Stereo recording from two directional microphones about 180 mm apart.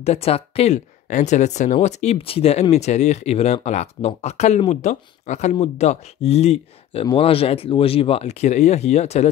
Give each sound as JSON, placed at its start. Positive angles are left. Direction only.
{"t": 0.0, "sound": "speech", "side_deg": 35}